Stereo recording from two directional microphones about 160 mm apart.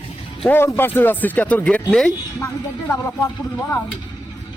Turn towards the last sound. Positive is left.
turn(degrees=20)  # may be behind; listen again after turning